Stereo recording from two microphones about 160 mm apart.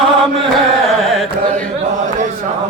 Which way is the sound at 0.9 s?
Centre (ahead or behind).